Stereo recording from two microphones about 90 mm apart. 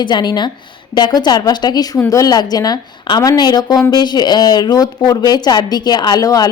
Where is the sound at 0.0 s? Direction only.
55° left (ahead or behind).